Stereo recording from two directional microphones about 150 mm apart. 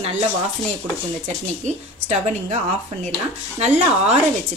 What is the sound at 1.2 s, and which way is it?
A woman's voice, 50° right (ahead or behind).